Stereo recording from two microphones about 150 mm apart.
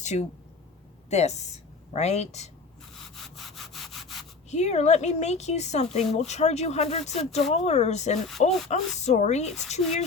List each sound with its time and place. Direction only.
0.0 s speech: 50° left (ahead or behind)
2.9 s rub: centre (ahead or behind)
4.5 s speech: 50° left (ahead or behind)